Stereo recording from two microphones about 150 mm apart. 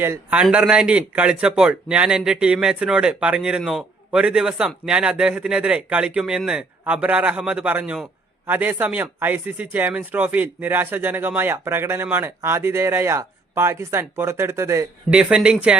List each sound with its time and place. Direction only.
0.0 s speech: 15° right (ahead or behind)
15.1 s speech: 5° right (ahead or behind)